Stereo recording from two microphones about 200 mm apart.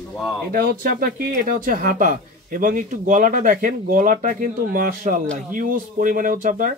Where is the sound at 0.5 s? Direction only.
45° right (ahead or behind).